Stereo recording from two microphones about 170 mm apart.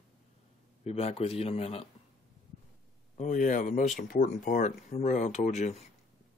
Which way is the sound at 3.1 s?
45° left (ahead or behind).